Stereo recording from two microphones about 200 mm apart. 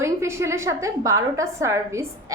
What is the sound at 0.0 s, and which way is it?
A woman's voice, 15° right (ahead or behind).